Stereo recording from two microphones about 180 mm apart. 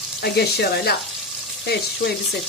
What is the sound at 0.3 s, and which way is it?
Frying, 60° left (ahead or behind).